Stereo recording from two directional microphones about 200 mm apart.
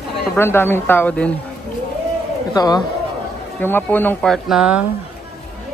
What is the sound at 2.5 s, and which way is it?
Speech, 20° left (ahead or behind).